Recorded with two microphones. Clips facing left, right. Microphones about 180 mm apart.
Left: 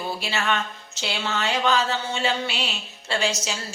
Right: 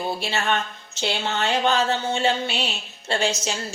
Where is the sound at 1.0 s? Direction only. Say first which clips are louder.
Right 3 dB; 55° right (ahead or behind).